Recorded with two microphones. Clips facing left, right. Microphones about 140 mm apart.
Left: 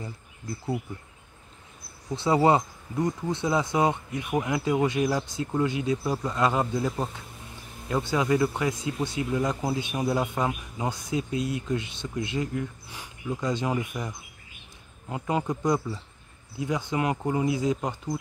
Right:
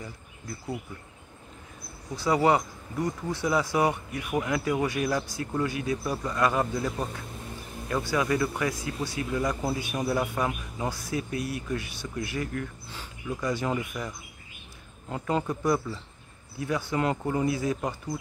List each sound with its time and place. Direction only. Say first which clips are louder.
2.1 s speech: left 2 dB; 25° left (ahead or behind)